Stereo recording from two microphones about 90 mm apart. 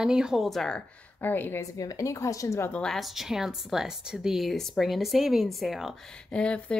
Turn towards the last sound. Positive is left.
turn(degrees=15)  # may be behind; listen again after turning